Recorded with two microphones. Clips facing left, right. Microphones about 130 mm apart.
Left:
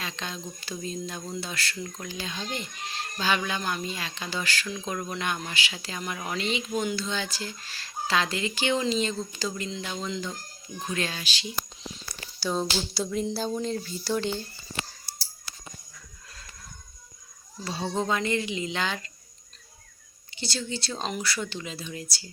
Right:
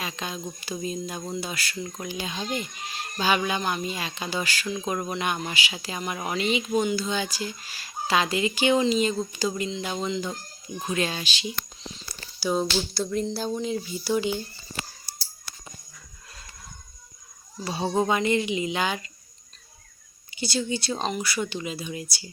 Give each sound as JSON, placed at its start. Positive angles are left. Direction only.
{"t": 0.0, "sound": "speech", "side_deg": -10}
{"t": 12.4, "sound": "speech", "side_deg": -10}
{"t": 12.9, "sound": "music", "side_deg": 5}
{"t": 13.3, "sound": "speech", "side_deg": 0}
{"t": 17.6, "sound": "speech", "side_deg": -15}
{"t": 20.3, "sound": "speech", "side_deg": -10}